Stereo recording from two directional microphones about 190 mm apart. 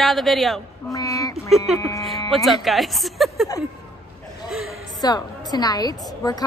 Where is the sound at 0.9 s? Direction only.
15° left (ahead or behind).